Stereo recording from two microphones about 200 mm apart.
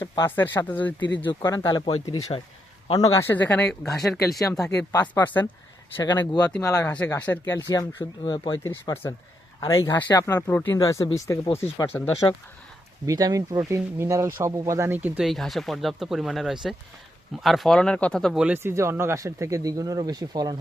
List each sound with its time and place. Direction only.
0.0 s speech: 15° left (ahead or behind)
0.9 s speech: 70° left (ahead or behind)
1.3 s speech: 20° left (ahead or behind); by 4.7 s centre (ahead or behind)
4.7 s speech: 15° left (ahead or behind)
13.1 s speech: 20° right (ahead or behind)